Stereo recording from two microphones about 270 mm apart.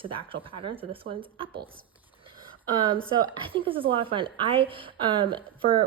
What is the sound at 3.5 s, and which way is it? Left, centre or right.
A woman's voice, centre.